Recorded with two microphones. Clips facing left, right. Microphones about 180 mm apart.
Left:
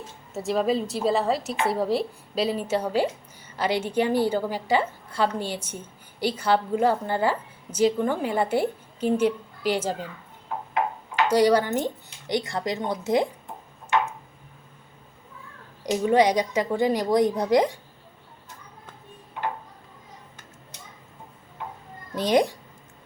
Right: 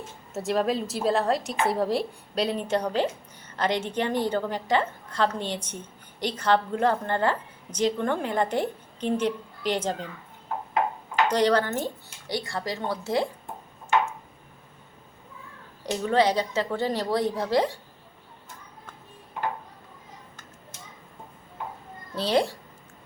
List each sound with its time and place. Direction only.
0.3 s a woman's voice: centre (ahead or behind)
11.3 s a woman's voice: 10° left (ahead or behind)
15.8 s a woman's voice: 15° left (ahead or behind)
22.1 s a child's voice: 15° left (ahead or behind)